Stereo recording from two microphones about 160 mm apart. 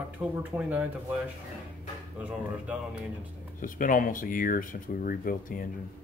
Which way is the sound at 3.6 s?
55° left (ahead or behind).